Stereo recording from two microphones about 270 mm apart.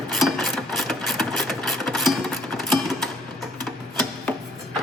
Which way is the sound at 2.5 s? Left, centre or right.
Centre.